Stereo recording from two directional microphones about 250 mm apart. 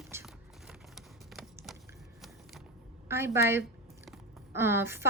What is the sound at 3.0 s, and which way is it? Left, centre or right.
Speech, centre.